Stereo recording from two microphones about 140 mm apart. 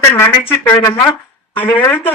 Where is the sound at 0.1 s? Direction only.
15° left (ahead or behind).